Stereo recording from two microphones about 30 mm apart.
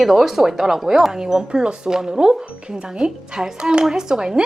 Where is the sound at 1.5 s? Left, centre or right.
Right.